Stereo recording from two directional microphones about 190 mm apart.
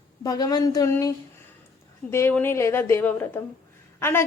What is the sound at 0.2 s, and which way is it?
A woman's voice, 20° left (ahead or behind).